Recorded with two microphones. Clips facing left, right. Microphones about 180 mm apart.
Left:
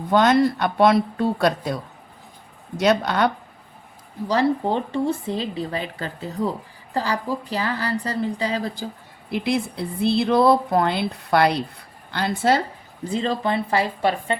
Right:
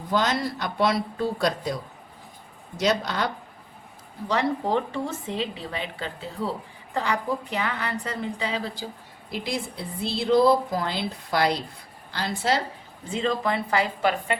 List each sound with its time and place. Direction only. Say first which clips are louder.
0.1 s speech: left 8 dB; 60° left (ahead or behind)
4.3 s a woman's voice: left 4 dB; 35° left (ahead or behind)
9.3 s speech: left 7 dB; 60° left (ahead or behind)
13.1 s a woman's voice: left 2 dB; 35° left (ahead or behind)